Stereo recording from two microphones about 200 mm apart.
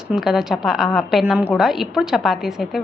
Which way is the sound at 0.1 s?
Centre (ahead or behind).